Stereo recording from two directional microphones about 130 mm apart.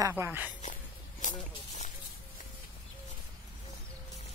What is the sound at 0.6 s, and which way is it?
Walk, 75° left (ahead or behind).